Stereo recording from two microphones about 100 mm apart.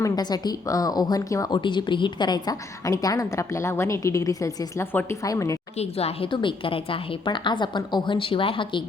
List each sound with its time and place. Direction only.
0.0 s a woman's voice: 40° left (ahead or behind)
1.5 s a woman's voice: 50° left (ahead or behind); by 5.5 s 35° left (ahead or behind)
5.8 s speech: 90° left
6.3 s a woman's voice: 60° left (ahead or behind)